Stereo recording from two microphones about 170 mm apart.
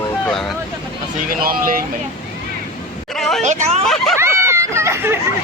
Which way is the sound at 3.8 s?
Centre (ahead or behind).